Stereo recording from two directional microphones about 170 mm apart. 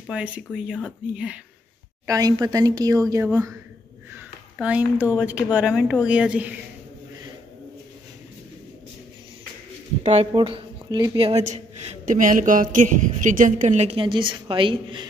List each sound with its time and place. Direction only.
0.1 s speech: 5° right (ahead or behind)
2.0 s speech: 20° right (ahead or behind)
4.1 s a sound: 10° right (ahead or behind)
5.2 s speech: 10° right (ahead or behind)
10.0 s a woman's voice: 35° right (ahead or behind)